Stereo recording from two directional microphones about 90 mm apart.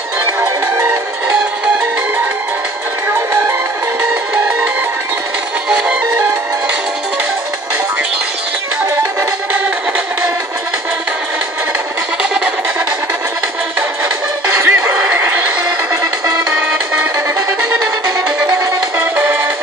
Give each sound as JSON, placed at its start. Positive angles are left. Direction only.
{"t": 5.7, "sound": "music", "side_deg": -10}
{"t": 12.2, "sound": "a sound", "side_deg": -10}
{"t": 14.5, "sound": "music", "side_deg": -25}
{"t": 15.0, "sound": "neigh", "side_deg": -20}
{"t": 18.9, "sound": "music", "side_deg": -25}